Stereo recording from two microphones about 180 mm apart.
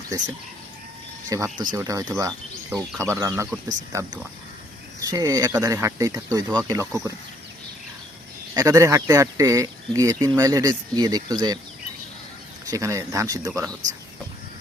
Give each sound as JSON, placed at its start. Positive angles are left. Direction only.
{"t": 1.3, "sound": "speech", "side_deg": -20}
{"t": 4.9, "sound": "speech", "side_deg": -20}
{"t": 8.5, "sound": "speech", "side_deg": -15}
{"t": 12.7, "sound": "speech", "side_deg": -15}